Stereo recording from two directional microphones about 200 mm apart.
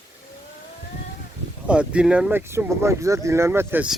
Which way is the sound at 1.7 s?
5° right (ahead or behind).